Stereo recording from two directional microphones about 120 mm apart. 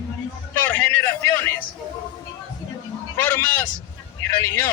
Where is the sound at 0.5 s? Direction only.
15° left (ahead or behind).